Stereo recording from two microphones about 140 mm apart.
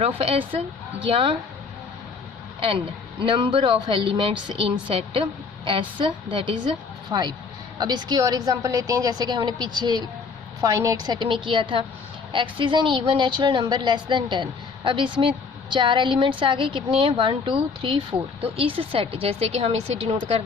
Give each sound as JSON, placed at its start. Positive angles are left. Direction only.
{"t": 0.0, "sound": "speech", "side_deg": -40}
{"t": 2.6, "sound": "a woman's voice", "side_deg": -40}